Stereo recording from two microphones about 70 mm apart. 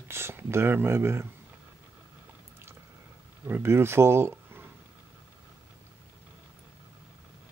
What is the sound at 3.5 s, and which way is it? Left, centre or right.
Speech, right.